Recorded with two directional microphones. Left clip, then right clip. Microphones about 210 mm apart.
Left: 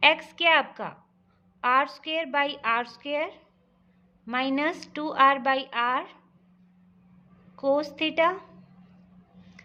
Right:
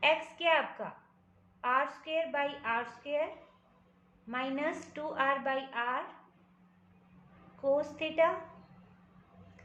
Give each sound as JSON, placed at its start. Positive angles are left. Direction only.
{"t": 0.0, "sound": "a woman's voice", "side_deg": 50}
{"t": 4.3, "sound": "a woman's voice", "side_deg": 50}
{"t": 7.6, "sound": "a woman's voice", "side_deg": 55}